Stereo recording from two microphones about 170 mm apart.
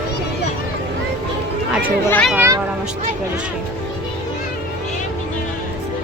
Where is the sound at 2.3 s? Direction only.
15° right (ahead or behind).